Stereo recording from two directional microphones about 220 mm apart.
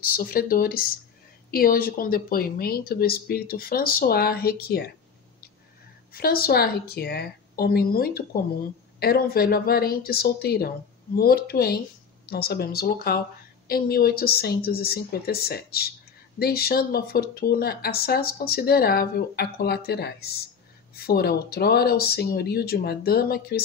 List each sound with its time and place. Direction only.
0.1 s speech: 40° left (ahead or behind)
6.1 s speech: 45° left (ahead or behind)